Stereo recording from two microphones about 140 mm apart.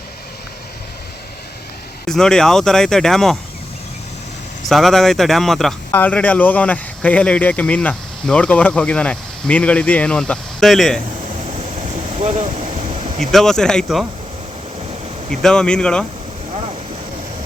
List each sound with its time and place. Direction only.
2.0 s speech: 5° left (ahead or behind)
4.7 s speech: centre (ahead or behind)
5.9 s speech: 10° left (ahead or behind)
12.2 s vehicle: 55° right (ahead or behind)
13.3 s speech: 5° left (ahead or behind)
15.3 s speech: 5° left (ahead or behind)